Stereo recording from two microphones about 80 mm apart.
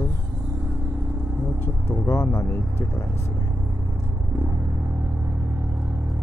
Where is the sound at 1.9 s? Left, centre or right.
Left.